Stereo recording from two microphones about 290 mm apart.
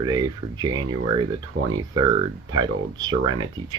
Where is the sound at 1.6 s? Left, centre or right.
Right.